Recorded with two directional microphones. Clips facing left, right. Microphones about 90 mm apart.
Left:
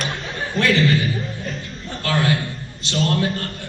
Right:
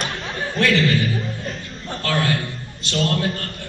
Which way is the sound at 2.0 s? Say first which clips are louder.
Left 1 dB; 20° left (ahead or behind).